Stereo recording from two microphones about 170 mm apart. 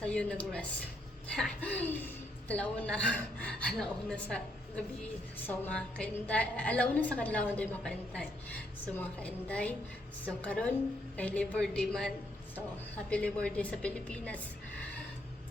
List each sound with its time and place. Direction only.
0.0 s a woman's voice: 5° left (ahead or behind)